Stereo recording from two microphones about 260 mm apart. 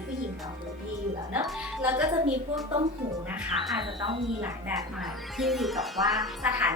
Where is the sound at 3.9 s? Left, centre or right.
Centre.